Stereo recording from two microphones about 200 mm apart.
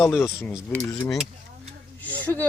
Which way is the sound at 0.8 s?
15° left (ahead or behind).